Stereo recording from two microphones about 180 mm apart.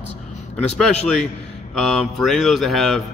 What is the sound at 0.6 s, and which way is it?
Mantra, 5° left (ahead or behind).